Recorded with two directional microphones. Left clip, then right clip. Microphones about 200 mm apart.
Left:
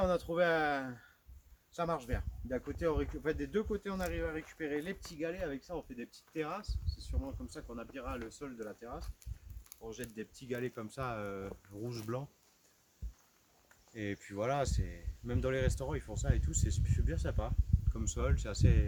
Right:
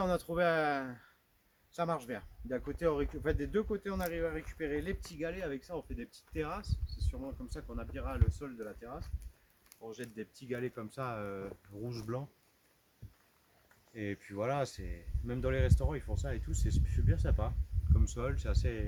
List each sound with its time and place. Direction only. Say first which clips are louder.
0.0 s speech: even; 40° right (ahead or behind); by 12.2 s centre (ahead or behind)
13.9 s speech: even; centre (ahead or behind)